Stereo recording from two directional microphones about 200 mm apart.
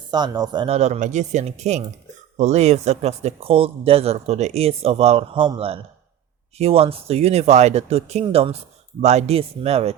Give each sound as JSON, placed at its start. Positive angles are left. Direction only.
{"t": 0.1, "sound": "speech", "side_deg": -20}